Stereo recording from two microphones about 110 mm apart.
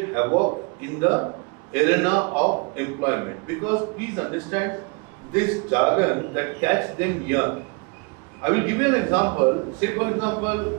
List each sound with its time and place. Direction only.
0.0 s a man's voice: 25° right (ahead or behind)